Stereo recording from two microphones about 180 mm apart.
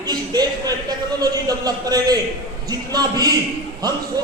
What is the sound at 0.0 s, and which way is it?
A man's voice, 20° right (ahead or behind).